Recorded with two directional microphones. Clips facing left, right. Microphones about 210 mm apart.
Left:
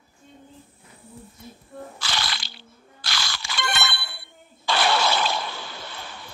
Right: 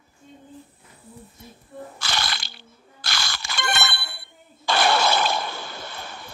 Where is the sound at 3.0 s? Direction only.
45° right (ahead or behind).